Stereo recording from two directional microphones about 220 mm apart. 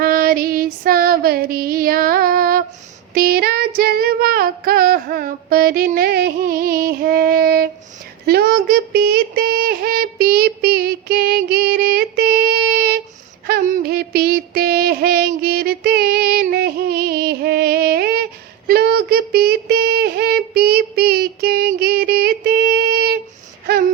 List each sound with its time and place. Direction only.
0.0 s female singing: 45° right (ahead or behind)
13.5 s music: 45° right (ahead or behind)
18.7 s female singing: 45° right (ahead or behind)